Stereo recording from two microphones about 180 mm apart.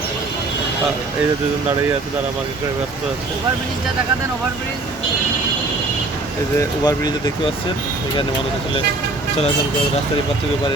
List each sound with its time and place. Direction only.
6.6 s speech: 20° left (ahead or behind)